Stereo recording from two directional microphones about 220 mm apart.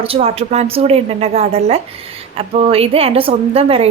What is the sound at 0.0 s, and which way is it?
A woman's voice, 25° right (ahead or behind).